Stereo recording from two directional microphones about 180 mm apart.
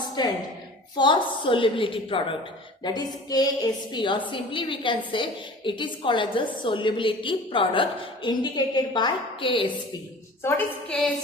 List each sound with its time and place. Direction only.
0.2 s a woman's voice: 25° left (ahead or behind)
10.4 s a woman's voice: 5° left (ahead or behind)